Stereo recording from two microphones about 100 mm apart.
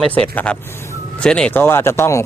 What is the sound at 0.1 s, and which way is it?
Speech, 15° left (ahead or behind).